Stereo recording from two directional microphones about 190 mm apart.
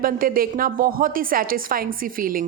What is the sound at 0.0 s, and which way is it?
A woman's voice, 50° right (ahead or behind).